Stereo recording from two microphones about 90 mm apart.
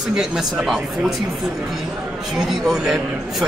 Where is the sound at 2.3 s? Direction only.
5° right (ahead or behind).